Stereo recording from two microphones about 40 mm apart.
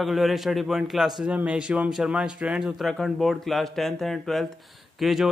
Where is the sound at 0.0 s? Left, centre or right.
Centre.